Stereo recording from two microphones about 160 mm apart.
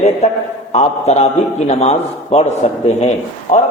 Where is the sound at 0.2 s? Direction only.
45° left (ahead or behind).